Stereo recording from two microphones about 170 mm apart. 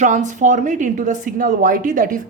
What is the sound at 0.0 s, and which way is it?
A woman's voice, 45° right (ahead or behind).